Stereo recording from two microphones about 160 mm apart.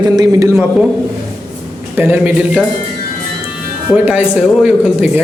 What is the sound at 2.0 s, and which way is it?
Speech, 10° right (ahead or behind).